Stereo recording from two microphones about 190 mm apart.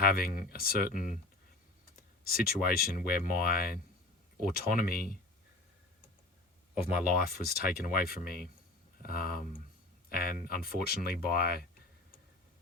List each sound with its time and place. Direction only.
0.1 s speech: 50° left (ahead or behind)
7.2 s speech: 50° left (ahead or behind)